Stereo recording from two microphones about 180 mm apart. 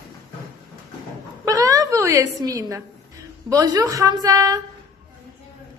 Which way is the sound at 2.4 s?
20° right (ahead or behind).